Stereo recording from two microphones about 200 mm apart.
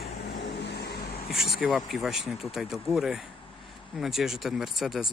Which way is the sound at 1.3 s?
Centre (ahead or behind).